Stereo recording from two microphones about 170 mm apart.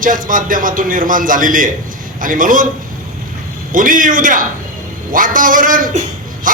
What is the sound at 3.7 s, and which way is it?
A man's voice, 50° right (ahead or behind).